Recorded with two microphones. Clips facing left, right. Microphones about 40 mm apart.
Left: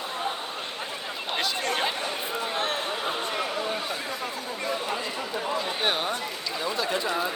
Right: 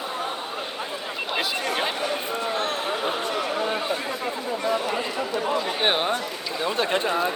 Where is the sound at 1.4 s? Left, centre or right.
Centre.